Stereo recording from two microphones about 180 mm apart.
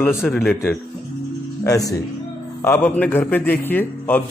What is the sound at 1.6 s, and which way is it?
A man's voice, 20° left (ahead or behind).